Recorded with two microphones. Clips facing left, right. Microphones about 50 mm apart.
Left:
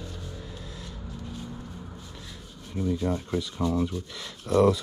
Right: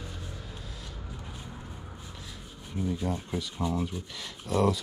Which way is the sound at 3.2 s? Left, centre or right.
Centre.